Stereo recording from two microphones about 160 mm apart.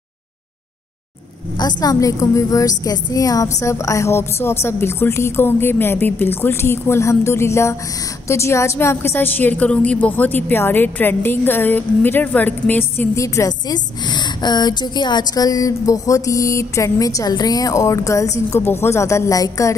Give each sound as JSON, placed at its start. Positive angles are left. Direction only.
{"t": 1.6, "sound": "a woman's voice", "side_deg": 25}